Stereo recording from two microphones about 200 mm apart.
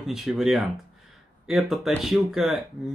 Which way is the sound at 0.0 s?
Centre (ahead or behind).